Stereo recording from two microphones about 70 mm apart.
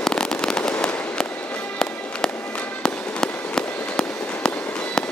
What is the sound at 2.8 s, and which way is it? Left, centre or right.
Fireworks, centre.